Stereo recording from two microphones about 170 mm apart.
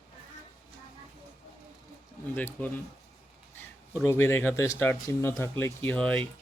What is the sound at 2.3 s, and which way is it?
Speech, 10° left (ahead or behind).